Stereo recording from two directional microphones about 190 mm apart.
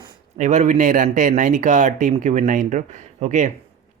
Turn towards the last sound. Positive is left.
turn(degrees=-40)  # may be behind; listen again after turning